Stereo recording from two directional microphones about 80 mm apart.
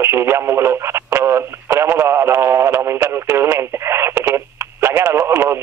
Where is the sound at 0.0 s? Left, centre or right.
Right.